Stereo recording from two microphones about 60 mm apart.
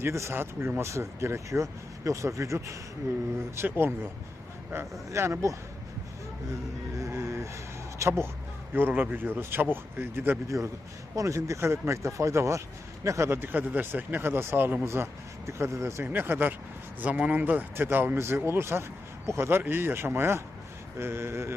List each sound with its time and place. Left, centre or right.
0.0 s speech: right
0.3 s speech: right
0.8 s speech: right
3.5 s speech: right
6.9 s a sound: right
8.0 s speech: right
8.7 s speech: right
10.5 s speech: right
13.3 s speech: right
16.0 s speech: right
17.0 s speech: right